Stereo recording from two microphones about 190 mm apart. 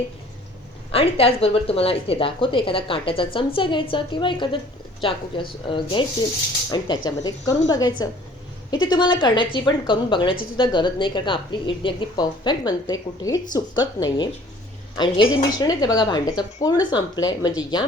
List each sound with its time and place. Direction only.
0.9 s a woman's voice: 30° left (ahead or behind)